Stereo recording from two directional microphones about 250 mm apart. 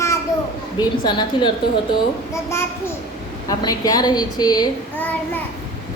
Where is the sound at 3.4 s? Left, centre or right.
Centre.